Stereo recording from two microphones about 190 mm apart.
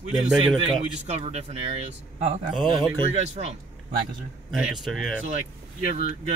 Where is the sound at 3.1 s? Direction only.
35° right (ahead or behind).